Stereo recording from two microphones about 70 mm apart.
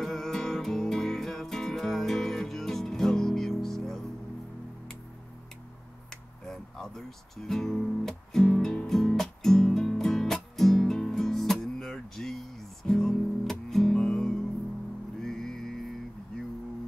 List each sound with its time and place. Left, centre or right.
0.0 s music: centre
6.4 s guitar: centre
15.2 s music: centre